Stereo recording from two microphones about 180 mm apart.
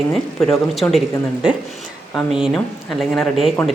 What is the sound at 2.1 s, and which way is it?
A woman's voice, 5° right (ahead or behind).